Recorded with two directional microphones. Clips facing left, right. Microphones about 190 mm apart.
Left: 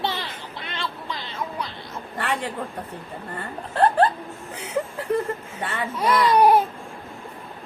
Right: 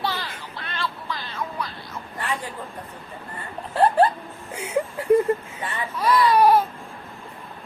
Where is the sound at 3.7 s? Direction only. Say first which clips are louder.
Right 1 dB; 10° right (ahead or behind).